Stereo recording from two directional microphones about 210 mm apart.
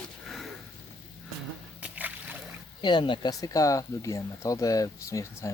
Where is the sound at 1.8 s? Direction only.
5° right (ahead or behind).